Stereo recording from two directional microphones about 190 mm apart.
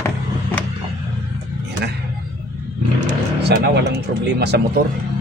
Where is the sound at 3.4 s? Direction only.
60° right (ahead or behind).